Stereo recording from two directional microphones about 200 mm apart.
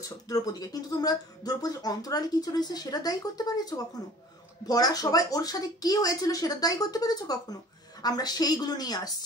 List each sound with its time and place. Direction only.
0.3 s speech: 20° left (ahead or behind)